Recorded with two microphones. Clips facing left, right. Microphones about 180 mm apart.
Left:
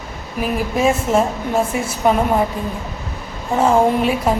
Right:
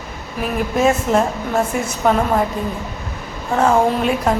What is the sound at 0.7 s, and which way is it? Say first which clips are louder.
Speech: right 1 dB; 5° left (ahead or behind).